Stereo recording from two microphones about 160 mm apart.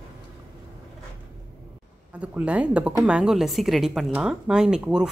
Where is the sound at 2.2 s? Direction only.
5° right (ahead or behind).